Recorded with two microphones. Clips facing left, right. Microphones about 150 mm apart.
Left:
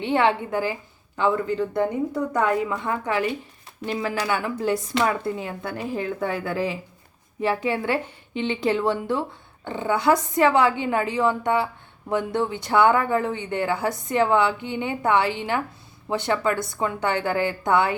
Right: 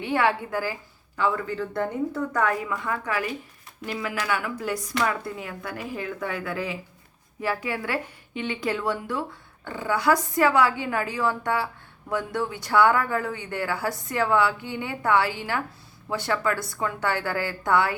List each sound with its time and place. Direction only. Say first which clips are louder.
0.0 s a woman's voice: left 3 dB; 25° left (ahead or behind)